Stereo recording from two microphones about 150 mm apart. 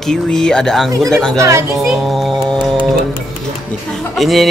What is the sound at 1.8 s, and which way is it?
A child's voice, centre (ahead or behind).